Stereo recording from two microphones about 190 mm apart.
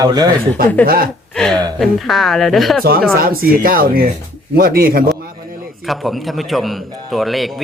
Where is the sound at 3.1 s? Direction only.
50° right (ahead or behind).